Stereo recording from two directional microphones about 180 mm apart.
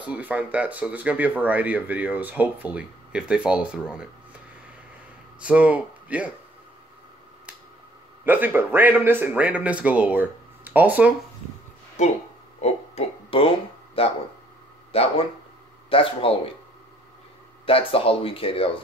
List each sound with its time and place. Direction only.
0.0 s speech: 5° right (ahead or behind)
5.4 s speech: 5° right (ahead or behind)
8.3 s speech: 10° right (ahead or behind)
12.0 s speech: 40° left (ahead or behind)
12.5 s a sound: 35° left (ahead or behind)
14.9 s speech: 35° left (ahead or behind)
17.6 s speech: 30° left (ahead or behind)